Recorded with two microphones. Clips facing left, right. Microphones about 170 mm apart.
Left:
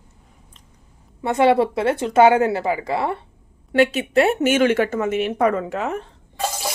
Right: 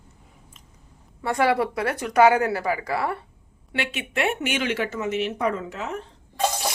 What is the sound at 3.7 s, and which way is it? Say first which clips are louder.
Speech: left 12 dB; 40° left (ahead or behind).